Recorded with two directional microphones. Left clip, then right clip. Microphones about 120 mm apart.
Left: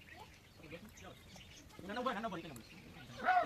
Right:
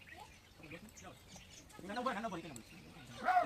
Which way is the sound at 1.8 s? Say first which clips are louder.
Even; centre (ahead or behind).